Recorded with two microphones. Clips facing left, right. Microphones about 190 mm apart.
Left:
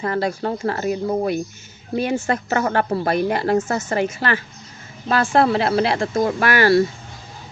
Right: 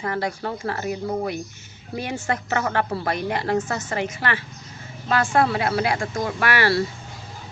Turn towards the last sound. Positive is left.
turn(degrees=30)  # may be behind; listen again after turning